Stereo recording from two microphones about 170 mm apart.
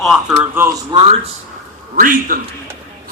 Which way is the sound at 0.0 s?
5° right (ahead or behind).